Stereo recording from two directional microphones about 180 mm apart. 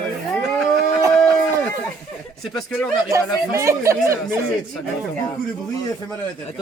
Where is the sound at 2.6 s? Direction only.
5° left (ahead or behind).